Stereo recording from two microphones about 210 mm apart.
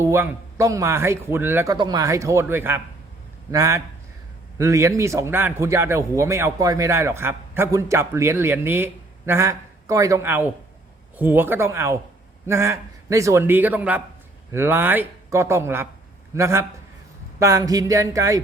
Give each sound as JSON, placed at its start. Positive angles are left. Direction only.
{"t": 0.0, "sound": "a man's voice", "side_deg": -15}